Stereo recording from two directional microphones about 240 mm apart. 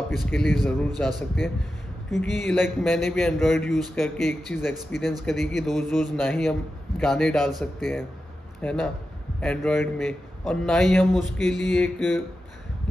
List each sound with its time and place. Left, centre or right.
0.1 s a man's voice: centre
8.5 s a man's voice: centre